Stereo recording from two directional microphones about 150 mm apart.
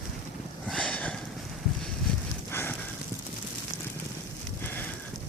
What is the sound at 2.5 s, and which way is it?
Horse, 15° left (ahead or behind).